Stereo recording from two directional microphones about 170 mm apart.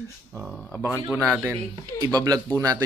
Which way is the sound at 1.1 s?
5° left (ahead or behind).